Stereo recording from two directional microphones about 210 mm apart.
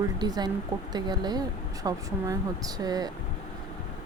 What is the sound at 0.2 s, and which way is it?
Speech, 20° right (ahead or behind).